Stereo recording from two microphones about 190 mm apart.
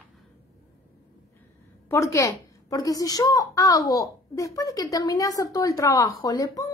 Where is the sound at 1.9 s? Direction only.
15° left (ahead or behind).